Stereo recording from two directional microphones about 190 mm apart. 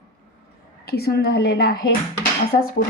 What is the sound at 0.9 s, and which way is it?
Speech, 55° left (ahead or behind).